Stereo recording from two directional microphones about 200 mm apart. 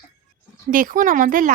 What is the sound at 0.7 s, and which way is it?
Speech, 40° right (ahead or behind).